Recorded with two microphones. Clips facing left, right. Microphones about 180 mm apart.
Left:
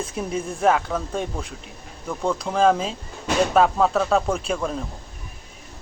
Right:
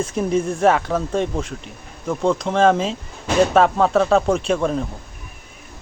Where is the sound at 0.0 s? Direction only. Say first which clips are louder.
Right 7 dB; centre (ahead or behind).